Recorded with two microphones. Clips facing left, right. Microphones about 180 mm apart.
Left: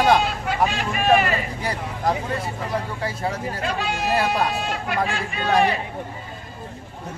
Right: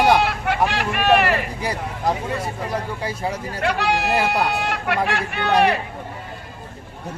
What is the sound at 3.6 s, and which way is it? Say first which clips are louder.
Speech: right 8 dB; 70° right (ahead or behind).